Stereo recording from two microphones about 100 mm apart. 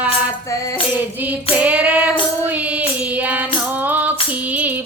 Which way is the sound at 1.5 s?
15° right (ahead or behind).